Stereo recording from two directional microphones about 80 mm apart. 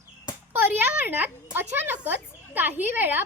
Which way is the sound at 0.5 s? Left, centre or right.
Right.